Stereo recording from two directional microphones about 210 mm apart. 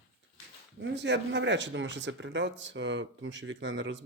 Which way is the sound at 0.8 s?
55° right (ahead or behind).